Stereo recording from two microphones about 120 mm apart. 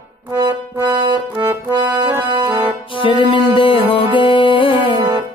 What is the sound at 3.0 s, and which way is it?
Music, 45° left (ahead or behind).